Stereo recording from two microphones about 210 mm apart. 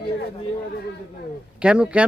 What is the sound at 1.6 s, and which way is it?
Speech, 5° right (ahead or behind).